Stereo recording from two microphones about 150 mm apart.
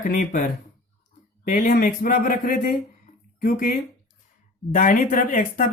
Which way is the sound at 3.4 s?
80° left.